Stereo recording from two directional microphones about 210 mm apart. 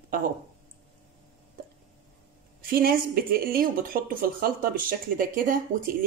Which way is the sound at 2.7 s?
45° right (ahead or behind).